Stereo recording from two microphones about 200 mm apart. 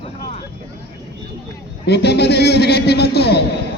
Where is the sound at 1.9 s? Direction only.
55° left (ahead or behind).